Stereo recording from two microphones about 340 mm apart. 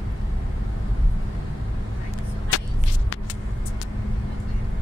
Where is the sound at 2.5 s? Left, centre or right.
Left.